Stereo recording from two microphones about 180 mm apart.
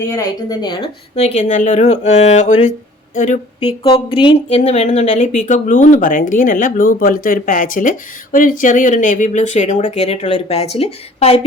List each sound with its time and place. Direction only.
0.0 s speech: 20° left (ahead or behind)
1.1 s speech: 40° left (ahead or behind)
3.8 s speech: 30° left (ahead or behind)